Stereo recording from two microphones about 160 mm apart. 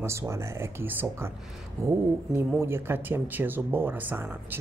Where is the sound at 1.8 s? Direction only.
20° right (ahead or behind).